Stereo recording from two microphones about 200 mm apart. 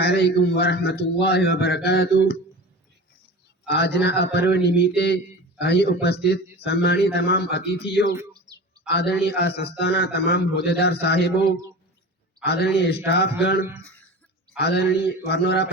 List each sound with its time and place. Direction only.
0.0 s a man's voice: 50° left (ahead or behind)
3.7 s a man's voice: 55° left (ahead or behind)
8.1 s bird: 20° right (ahead or behind)
8.9 s a man's voice: 55° left (ahead or behind)
12.7 s a man's voice: 55° left (ahead or behind)